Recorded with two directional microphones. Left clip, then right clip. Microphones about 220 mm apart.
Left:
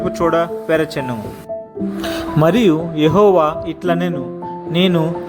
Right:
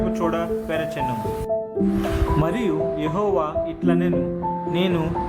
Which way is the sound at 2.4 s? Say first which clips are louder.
Left 12 dB; 30° left (ahead or behind).